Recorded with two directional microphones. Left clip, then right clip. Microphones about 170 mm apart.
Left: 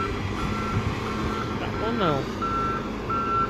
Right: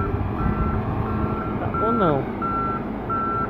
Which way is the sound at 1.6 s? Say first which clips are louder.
Right 6 dB; 15° right (ahead or behind).